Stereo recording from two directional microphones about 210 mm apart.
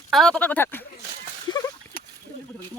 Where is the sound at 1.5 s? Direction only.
15° left (ahead or behind).